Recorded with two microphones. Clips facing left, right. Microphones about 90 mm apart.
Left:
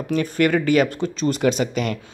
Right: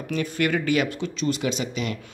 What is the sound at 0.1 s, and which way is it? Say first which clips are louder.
Speech: left 5 dB; 40° left (ahead or behind).